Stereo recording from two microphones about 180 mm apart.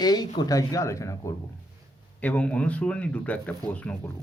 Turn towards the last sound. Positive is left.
turn(degrees=5)  # may be behind; listen again after turning